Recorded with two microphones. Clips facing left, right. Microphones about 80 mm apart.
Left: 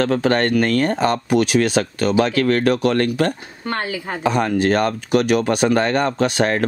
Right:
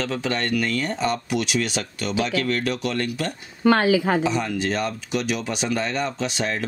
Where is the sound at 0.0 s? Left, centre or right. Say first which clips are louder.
Left 8 dB; left.